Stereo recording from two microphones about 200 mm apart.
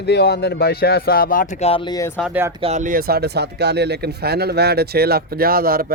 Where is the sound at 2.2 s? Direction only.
10° right (ahead or behind).